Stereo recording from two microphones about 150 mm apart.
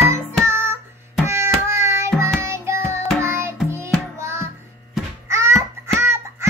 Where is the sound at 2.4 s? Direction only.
20° right (ahead or behind).